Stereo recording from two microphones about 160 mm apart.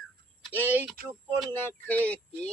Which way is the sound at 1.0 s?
65° right (ahead or behind).